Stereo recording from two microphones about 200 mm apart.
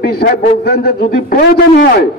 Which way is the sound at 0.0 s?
50° left (ahead or behind).